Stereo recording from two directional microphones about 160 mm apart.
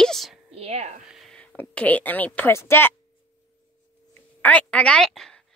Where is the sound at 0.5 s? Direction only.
40° right (ahead or behind).